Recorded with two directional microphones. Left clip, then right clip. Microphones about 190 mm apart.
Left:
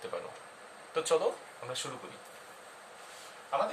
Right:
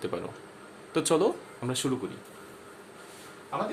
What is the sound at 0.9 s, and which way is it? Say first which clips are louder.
Speech: right 4 dB; 45° right (ahead or behind).